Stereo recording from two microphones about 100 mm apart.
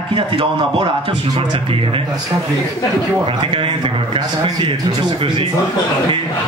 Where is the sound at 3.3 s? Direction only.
60° right (ahead or behind).